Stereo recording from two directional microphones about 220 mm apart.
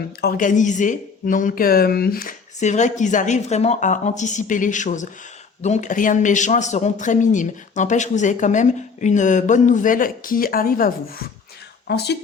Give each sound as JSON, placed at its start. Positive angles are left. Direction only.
{"t": 0.2, "sound": "a man's voice", "side_deg": 40}